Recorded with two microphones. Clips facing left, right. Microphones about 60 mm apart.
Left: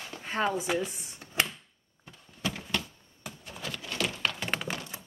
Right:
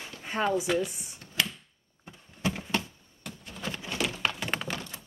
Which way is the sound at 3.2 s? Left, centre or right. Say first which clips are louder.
Even; centre.